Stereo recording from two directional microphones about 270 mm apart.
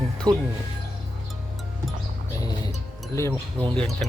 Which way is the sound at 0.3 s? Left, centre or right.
Centre.